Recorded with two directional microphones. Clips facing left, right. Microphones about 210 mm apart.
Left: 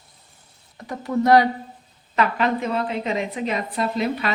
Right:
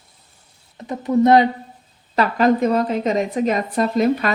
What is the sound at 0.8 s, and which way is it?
Speech, 20° right (ahead or behind).